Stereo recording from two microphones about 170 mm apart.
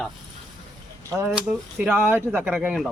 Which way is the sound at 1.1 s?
20° right (ahead or behind).